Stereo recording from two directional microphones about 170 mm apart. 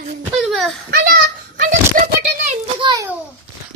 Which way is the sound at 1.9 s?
55° right (ahead or behind).